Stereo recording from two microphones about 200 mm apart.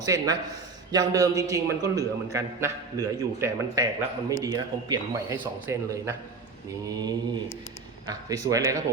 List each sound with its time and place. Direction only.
0.0 s a man's voice: 20° right (ahead or behind)
6.8 s mantra: 20° right (ahead or behind)
8.0 s a man's voice: 20° right (ahead or behind)